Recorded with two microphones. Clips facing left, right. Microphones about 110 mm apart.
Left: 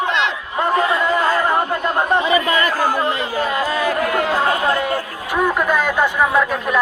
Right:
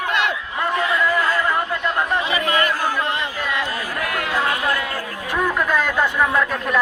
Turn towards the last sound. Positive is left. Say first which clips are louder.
# left 3 dB
turn(degrees=5)  # may be behind; listen again after turning